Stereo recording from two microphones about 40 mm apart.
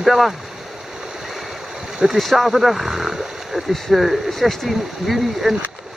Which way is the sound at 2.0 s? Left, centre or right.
Centre.